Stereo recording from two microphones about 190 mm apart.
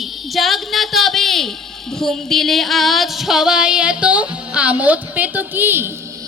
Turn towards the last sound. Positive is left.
turn(degrees=-10)  # may be behind; listen again after turning